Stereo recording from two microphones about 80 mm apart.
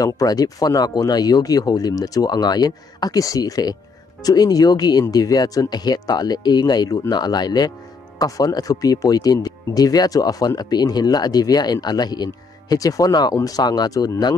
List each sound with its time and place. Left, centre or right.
0.0 s speech: left
8.2 s speech: left